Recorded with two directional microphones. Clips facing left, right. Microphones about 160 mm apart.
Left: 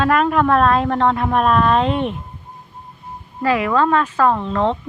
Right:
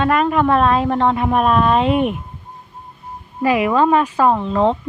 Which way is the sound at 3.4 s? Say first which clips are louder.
Right 2 dB; 15° right (ahead or behind).